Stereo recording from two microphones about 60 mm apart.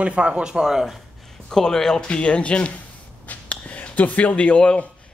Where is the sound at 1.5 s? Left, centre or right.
Centre.